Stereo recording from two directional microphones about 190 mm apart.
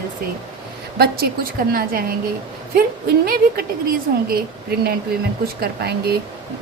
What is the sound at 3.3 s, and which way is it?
A woman's voice, 50° right (ahead or behind).